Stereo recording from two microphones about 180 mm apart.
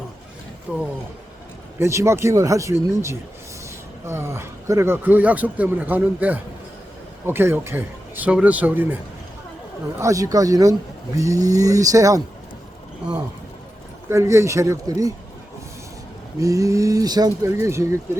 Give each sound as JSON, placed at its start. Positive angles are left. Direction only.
{"t": 0.7, "sound": "a man's voice", "side_deg": -5}
{"t": 10.0, "sound": "speech", "side_deg": -20}
{"t": 14.1, "sound": "a man's voice", "side_deg": -15}
{"t": 16.4, "sound": "a man's voice", "side_deg": -20}